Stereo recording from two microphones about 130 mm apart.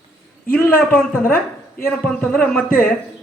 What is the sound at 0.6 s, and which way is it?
Speech, 15° left (ahead or behind).